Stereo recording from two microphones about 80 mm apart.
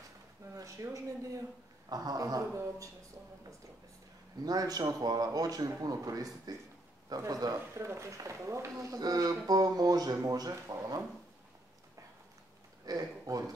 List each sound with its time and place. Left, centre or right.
0.6 s speech: right
1.9 s speech: right
4.5 s speech: right
7.5 s speech: right
10.5 s speech: right
12.8 s speech: right